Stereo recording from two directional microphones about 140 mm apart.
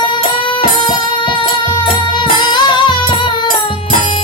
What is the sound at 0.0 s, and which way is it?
Music, 35° left (ahead or behind).